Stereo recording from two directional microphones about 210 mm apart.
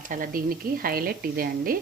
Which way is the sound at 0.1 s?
40° right (ahead or behind).